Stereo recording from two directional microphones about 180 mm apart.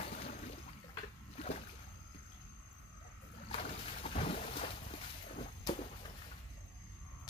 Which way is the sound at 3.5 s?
35° left (ahead or behind).